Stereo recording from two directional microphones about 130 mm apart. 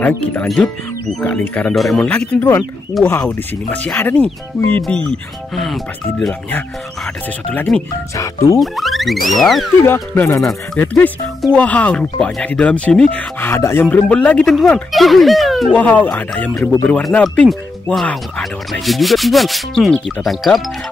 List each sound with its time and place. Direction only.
0.0 s speech: 10° left (ahead or behind)
7.7 s speech: centre (ahead or behind)
9.8 s speech: 15° left (ahead or behind)
11.5 s speech: 10° left (ahead or behind)
15.7 s speech: 10° left (ahead or behind)